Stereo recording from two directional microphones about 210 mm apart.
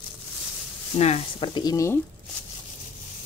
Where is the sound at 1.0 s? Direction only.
25° left (ahead or behind).